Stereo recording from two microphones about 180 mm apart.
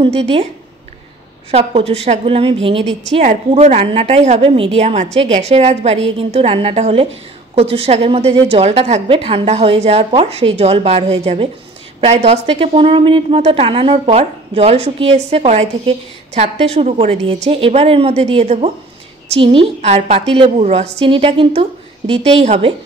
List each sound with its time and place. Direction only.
0.0 s a woman's voice: 30° right (ahead or behind)
1.5 s a woman's voice: 35° right (ahead or behind)